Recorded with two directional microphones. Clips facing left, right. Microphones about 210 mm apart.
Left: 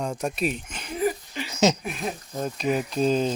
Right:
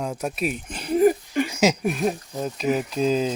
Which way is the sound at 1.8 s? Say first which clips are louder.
Right 8 dB; 45° right (ahead or behind).